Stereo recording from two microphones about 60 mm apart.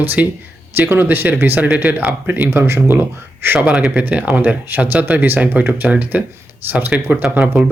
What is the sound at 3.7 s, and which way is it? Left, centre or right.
Speech, centre.